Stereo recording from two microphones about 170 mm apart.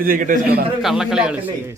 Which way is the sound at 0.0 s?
55° right (ahead or behind).